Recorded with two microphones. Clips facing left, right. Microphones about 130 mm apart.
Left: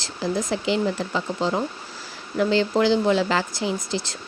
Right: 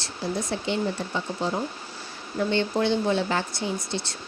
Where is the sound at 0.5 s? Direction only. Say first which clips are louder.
Left 4 dB; 90° left.